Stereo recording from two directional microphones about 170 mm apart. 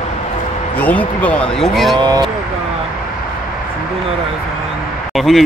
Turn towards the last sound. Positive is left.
turn(degrees=0)  # may be behind; listen again after turning